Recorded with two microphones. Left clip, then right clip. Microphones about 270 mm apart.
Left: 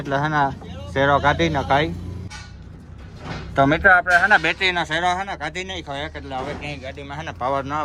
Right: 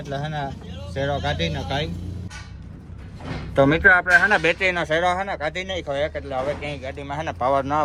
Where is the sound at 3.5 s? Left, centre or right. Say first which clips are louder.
Left 1 dB; centre.